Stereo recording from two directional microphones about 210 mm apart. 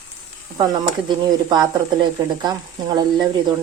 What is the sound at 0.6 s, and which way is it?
Speech, 20° right (ahead or behind).